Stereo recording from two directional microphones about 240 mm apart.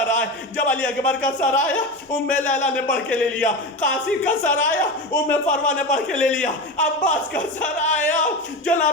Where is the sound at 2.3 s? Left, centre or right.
Left.